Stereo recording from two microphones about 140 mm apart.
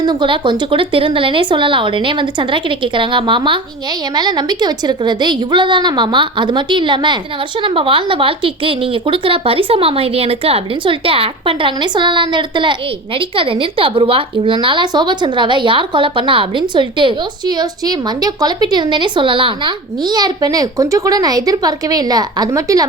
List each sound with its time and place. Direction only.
0.0 s speech: 35° right (ahead or behind)